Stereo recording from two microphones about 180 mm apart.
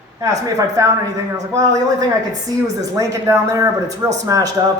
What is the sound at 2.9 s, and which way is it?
Speech, 15° right (ahead or behind).